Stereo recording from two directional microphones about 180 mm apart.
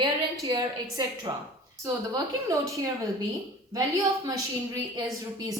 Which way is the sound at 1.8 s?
20° right (ahead or behind).